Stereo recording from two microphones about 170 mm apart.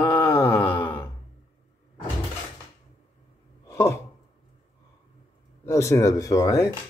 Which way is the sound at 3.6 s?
15° left (ahead or behind).